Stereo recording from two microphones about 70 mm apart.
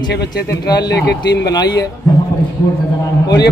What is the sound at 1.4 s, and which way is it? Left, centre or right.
Speech, left.